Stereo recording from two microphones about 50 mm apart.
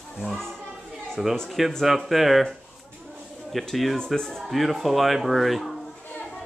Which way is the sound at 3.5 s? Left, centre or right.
Centre.